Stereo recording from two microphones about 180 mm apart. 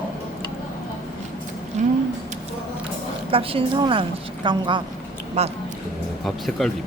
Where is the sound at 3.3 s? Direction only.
30° right (ahead or behind).